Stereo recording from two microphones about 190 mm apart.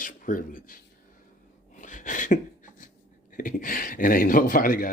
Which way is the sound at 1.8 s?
40° left (ahead or behind).